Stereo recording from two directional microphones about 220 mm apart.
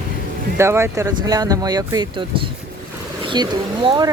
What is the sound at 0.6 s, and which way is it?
Speech, 10° right (ahead or behind).